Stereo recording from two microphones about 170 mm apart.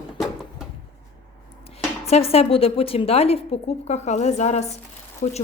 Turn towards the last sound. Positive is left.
turn(degrees=45)  # may be behind; listen again after turning